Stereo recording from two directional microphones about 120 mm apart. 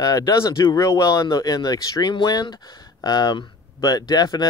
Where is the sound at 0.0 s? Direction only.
25° left (ahead or behind).